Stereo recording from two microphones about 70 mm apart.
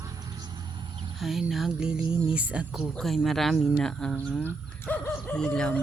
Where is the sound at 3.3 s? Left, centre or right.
Centre.